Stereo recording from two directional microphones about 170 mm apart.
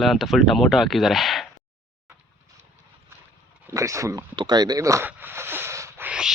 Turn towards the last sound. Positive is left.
turn(degrees=-5)  # may be behind; listen again after turning